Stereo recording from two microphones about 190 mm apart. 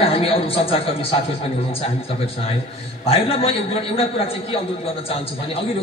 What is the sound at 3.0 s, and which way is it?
A man's voice, 30° left (ahead or behind).